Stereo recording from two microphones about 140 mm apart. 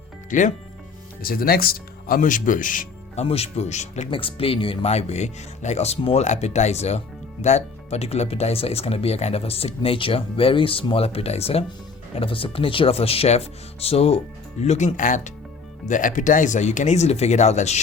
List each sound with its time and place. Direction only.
0.3 s speech: 65° left (ahead or behind)
1.2 s speech: 90° left; by 2.8 s 70° left (ahead or behind)
3.2 s speech: 45° left (ahead or behind)
4.1 s speech: 40° left (ahead or behind)